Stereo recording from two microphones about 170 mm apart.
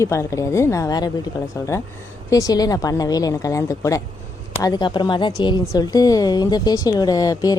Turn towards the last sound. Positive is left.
turn(degrees=20)  # may be behind; listen again after turning